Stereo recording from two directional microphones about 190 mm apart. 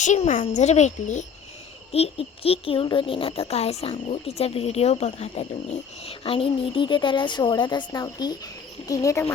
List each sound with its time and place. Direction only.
0.0 s a child's voice: 40° left (ahead or behind); by 9.2 s 15° left (ahead or behind)